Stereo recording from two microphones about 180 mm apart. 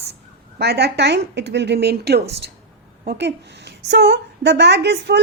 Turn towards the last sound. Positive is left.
turn(degrees=-70)  # may be behind; listen again after turning